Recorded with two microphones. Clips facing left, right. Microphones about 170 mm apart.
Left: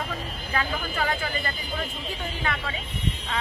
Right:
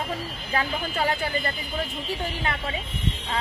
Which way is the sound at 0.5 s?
35° right (ahead or behind).